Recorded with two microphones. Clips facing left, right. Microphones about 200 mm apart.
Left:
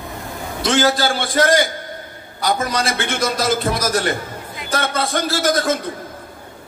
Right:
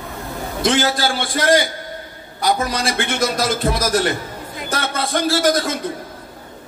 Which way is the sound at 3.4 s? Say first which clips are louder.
Even; 50° right (ahead or behind).